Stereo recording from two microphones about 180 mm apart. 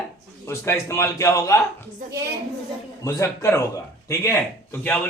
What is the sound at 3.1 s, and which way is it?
Speech, 15° left (ahead or behind).